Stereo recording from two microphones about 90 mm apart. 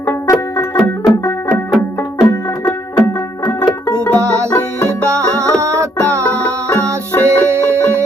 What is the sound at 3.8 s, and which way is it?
Music, 15° left (ahead or behind).